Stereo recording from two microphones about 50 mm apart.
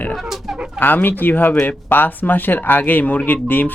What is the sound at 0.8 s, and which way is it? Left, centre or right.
Speech, left.